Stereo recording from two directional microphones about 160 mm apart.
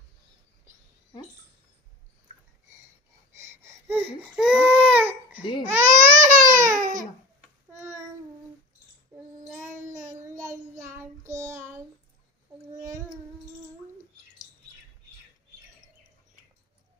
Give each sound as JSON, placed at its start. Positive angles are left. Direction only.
{"t": 3.6, "sound": "babbling", "side_deg": -15}
{"t": 4.0, "sound": "baby cry", "side_deg": -5}
{"t": 5.8, "sound": "baby cry", "side_deg": -50}
{"t": 9.8, "sound": "child singing", "side_deg": -50}
{"t": 10.8, "sound": "child singing", "side_deg": -15}